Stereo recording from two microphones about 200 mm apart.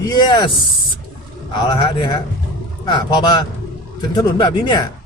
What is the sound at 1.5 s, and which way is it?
Speech, 20° left (ahead or behind).